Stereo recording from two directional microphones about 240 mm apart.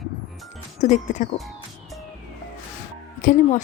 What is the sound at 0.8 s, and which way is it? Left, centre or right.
Speech, left.